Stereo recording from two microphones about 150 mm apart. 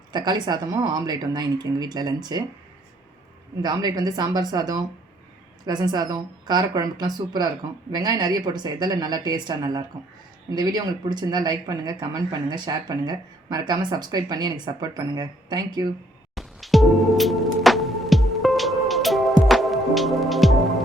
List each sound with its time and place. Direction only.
0.1 s speech: 30° right (ahead or behind)
3.6 s speech: 25° right (ahead or behind)
16.3 s music: centre (ahead or behind)